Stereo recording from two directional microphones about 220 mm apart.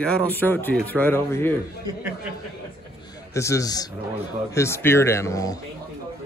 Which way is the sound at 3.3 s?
15° left (ahead or behind).